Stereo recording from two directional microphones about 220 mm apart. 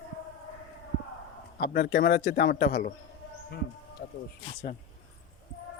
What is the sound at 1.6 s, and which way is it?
A man's voice, 45° left (ahead or behind).